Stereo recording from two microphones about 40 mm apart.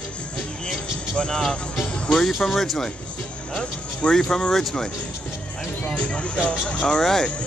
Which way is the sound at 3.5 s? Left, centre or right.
Left.